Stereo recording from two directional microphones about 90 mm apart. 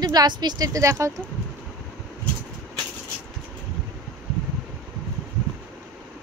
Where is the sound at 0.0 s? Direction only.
45° right (ahead or behind).